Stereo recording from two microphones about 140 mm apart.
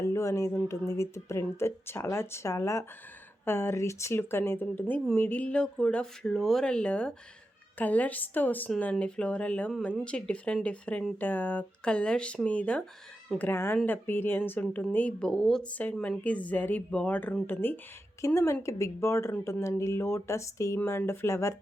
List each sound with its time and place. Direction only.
0.0 s speech: 20° left (ahead or behind)